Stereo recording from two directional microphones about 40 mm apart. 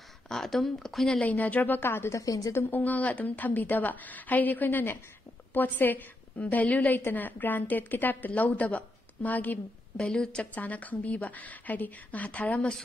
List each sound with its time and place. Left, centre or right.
0.3 s speech: centre
1.2 s a woman's voice: left
1.8 s a woman's voice: left
2.7 s a woman's voice: left
4.6 s a woman's voice: left
5.5 s a woman's voice: left
7.1 s a woman's voice: left
8.4 s a woman's voice: left
9.9 s a woman's voice: left
10.4 s a woman's voice: left